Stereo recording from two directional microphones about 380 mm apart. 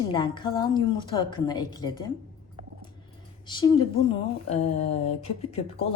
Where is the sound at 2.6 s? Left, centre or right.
Centre.